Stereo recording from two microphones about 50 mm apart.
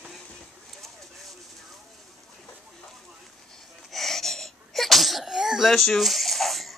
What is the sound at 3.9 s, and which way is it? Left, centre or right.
Sneeze, centre.